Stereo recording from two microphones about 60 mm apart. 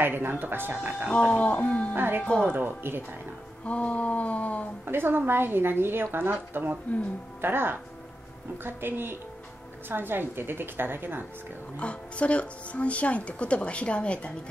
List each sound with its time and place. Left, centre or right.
0.0 s a woman's voice: right
1.2 s speech: centre
2.0 s a woman's voice: right
2.2 s speech: centre
2.5 s a woman's voice: right
3.6 s speech: left
4.8 s a woman's voice: right
11.7 s speech: centre